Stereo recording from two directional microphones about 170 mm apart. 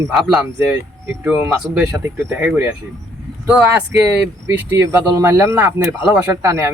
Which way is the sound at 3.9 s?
15° right (ahead or behind).